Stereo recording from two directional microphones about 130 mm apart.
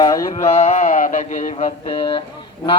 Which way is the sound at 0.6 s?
70° left (ahead or behind).